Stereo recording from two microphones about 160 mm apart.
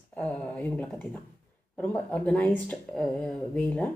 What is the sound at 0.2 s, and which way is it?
Speech, 10° left (ahead or behind).